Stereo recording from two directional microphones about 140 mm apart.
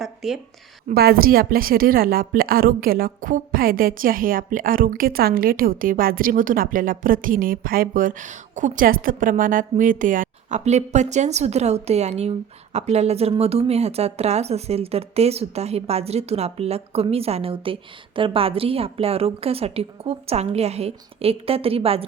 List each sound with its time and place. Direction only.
0.0 s a sound: centre (ahead or behind)
0.9 s a woman's voice: 90° right; by 10.6 s 70° right (ahead or behind)
10.6 s speech: 55° right (ahead or behind)